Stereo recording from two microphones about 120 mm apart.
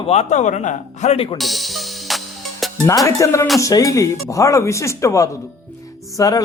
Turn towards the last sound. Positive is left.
turn(degrees=30)  # may be behind; listen again after turning